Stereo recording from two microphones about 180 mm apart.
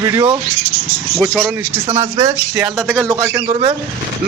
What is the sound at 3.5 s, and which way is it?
Speech, 35° right (ahead or behind).